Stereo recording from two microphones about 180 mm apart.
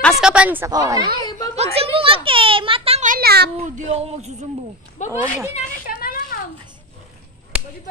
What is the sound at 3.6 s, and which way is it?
Child singing, 35° right (ahead or behind).